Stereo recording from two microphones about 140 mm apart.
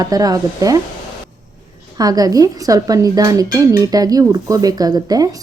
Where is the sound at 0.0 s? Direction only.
25° right (ahead or behind).